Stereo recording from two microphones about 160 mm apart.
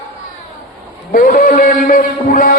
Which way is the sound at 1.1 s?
60° left (ahead or behind).